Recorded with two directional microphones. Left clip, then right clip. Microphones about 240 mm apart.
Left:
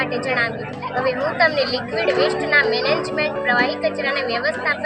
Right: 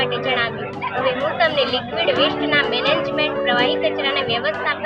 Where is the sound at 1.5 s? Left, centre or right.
Left.